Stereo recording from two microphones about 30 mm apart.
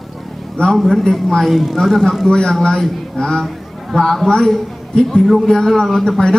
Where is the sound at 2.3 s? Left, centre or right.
Left.